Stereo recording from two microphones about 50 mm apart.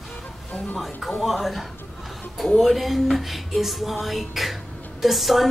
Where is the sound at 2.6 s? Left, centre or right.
Centre.